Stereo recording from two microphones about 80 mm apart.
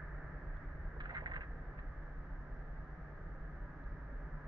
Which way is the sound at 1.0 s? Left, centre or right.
Right.